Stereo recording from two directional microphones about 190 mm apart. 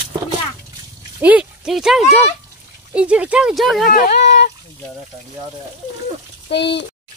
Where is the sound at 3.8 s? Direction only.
50° left (ahead or behind).